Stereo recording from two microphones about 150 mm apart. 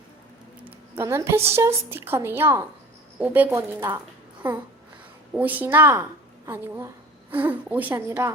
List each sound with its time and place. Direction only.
0.6 s a woman's voice: 15° right (ahead or behind)
5.3 s a woman's voice: 10° right (ahead or behind)